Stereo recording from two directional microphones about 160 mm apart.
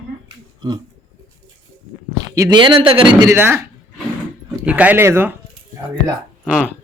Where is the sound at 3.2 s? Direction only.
15° right (ahead or behind).